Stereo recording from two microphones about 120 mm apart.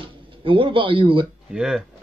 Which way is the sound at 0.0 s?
45° right (ahead or behind).